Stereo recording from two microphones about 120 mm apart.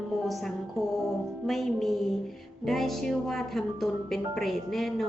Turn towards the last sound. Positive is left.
turn(degrees=0)  # may be behind; listen again after turning